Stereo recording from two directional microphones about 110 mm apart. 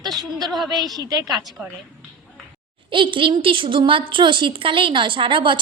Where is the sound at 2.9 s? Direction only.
50° right (ahead or behind).